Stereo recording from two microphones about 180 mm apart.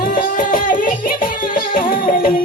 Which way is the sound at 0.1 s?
50° left (ahead or behind).